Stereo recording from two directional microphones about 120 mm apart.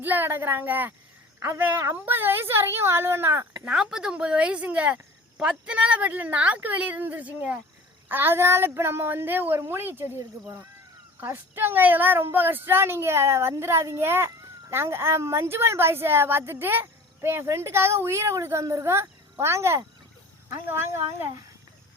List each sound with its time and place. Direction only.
0.0 s a woman's voice: 15° right (ahead or behind)
3.6 s a woman's voice: 5° right (ahead or behind)